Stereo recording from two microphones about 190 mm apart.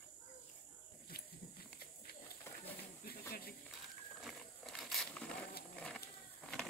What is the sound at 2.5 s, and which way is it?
Bird, 10° left (ahead or behind).